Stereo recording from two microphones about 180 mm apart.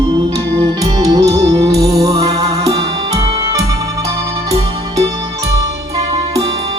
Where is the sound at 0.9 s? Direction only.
20° right (ahead or behind).